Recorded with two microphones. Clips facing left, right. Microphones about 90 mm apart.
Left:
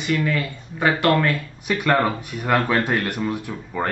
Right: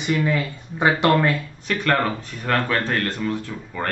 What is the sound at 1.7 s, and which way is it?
A man's voice, 10° left (ahead or behind).